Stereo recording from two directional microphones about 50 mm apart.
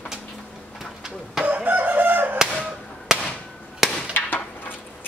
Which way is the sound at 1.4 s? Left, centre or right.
Right.